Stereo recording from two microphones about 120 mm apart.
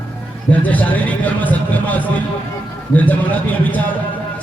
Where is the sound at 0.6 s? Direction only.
15° left (ahead or behind).